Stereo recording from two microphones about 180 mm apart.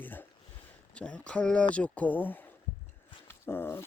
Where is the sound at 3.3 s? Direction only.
15° left (ahead or behind).